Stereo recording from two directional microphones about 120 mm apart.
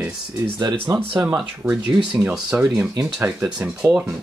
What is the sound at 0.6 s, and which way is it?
Speech, 40° right (ahead or behind).